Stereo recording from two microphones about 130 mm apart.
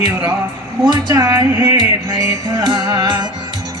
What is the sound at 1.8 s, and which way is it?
Music, 35° right (ahead or behind).